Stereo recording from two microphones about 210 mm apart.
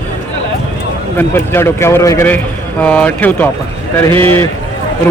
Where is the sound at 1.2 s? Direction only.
10° left (ahead or behind).